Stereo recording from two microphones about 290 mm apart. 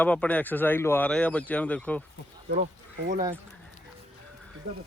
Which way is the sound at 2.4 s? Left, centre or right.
Right.